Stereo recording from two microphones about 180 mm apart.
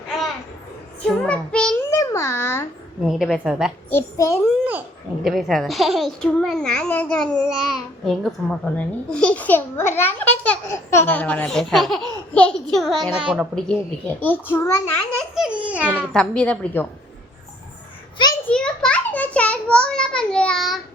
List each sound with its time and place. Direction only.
1.0 s child singing: 5° left (ahead or behind)
1.9 s babbling: 15° left (ahead or behind)
3.1 s a child's voice: centre (ahead or behind)
3.8 s a child's voice: 15° left (ahead or behind)
5.2 s a child's voice: centre (ahead or behind)
13.7 s a child's voice: 10° left (ahead or behind)
15.4 s speech: 5° right (ahead or behind)
16.1 s a child's voice: 5° left (ahead or behind)
18.2 s a sound: 25° left (ahead or behind)
18.5 s a sound: 5° left (ahead or behind)